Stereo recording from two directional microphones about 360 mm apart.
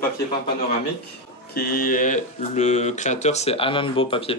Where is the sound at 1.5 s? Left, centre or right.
Left.